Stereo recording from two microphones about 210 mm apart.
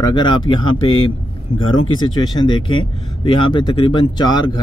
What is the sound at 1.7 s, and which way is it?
Speech, 80° left.